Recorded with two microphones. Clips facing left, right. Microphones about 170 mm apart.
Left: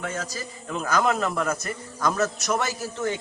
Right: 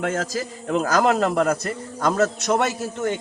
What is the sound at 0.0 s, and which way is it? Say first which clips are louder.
Speech: right 7 dB; 90° right.